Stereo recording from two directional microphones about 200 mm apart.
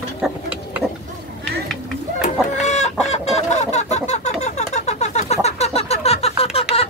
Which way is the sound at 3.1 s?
35° left (ahead or behind).